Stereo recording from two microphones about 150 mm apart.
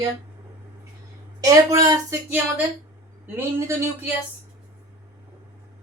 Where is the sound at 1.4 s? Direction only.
25° right (ahead or behind).